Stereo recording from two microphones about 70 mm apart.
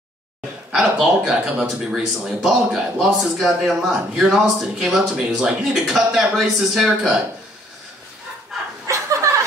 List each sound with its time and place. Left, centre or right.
0.7 s speech: centre
8.8 s chuckle: right